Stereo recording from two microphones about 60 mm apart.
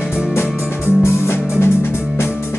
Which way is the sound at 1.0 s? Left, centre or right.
Left.